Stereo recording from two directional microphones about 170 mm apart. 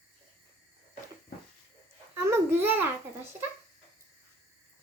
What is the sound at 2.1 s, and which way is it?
A child's voice, 15° right (ahead or behind).